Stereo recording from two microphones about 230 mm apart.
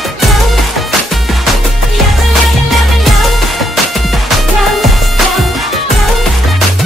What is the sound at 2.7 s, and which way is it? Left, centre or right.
Music, centre.